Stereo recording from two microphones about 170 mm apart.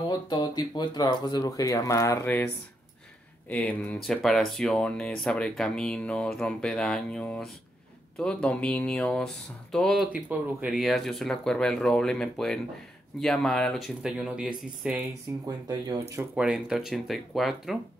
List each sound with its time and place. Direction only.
0.3 s speech: 25° left (ahead or behind); by 15.0 s 5° right (ahead or behind)
15.4 s speech: 25° right (ahead or behind)
16.3 s speech: 5° right (ahead or behind)